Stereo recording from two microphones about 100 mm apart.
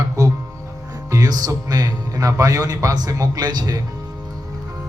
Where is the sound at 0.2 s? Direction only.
35° right (ahead or behind).